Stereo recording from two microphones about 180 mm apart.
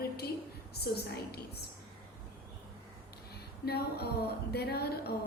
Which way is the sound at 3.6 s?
60° left (ahead or behind).